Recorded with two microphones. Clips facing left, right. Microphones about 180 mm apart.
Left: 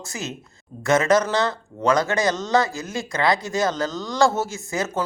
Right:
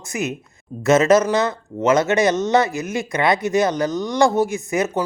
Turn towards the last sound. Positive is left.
turn(degrees=-20)  # may be behind; listen again after turning